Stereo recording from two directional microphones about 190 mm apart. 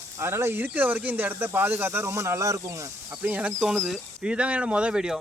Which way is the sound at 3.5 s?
5° left (ahead or behind).